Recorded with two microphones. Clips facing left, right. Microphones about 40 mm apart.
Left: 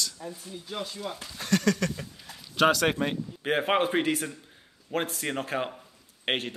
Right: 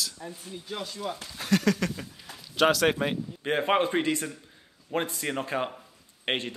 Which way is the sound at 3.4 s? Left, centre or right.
Centre.